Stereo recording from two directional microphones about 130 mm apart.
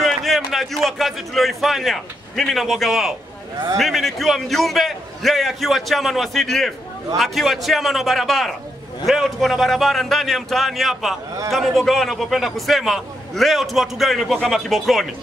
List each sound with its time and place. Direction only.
0.0 s a man's voice: centre (ahead or behind)